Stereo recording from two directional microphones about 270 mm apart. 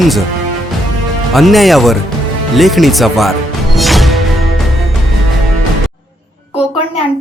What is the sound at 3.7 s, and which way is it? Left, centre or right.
Music, centre.